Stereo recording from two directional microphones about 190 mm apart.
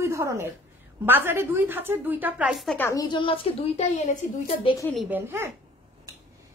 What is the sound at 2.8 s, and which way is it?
A woman's voice, 15° left (ahead or behind).